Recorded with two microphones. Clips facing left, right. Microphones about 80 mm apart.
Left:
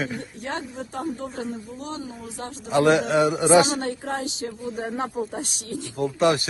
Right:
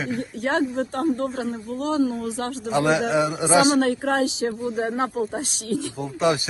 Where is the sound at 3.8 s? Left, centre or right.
Right.